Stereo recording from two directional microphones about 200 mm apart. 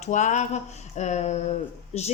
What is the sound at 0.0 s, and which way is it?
A woman's voice, 35° left (ahead or behind).